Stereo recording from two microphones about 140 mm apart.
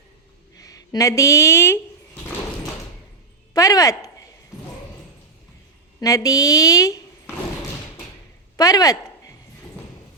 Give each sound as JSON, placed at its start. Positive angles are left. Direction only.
{"t": 0.6, "sound": "speech", "side_deg": 25}
{"t": 3.5, "sound": "speech", "side_deg": 25}
{"t": 6.0, "sound": "a woman's voice", "side_deg": 25}
{"t": 8.5, "sound": "a sound", "side_deg": 25}